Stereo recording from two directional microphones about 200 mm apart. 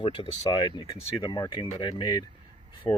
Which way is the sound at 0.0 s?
25° left (ahead or behind).